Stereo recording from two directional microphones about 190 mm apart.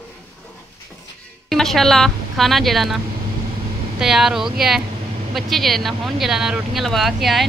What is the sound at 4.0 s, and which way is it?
Speech, centre (ahead or behind).